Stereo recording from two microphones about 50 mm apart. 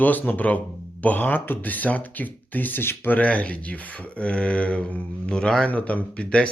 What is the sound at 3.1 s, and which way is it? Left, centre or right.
Speech, left.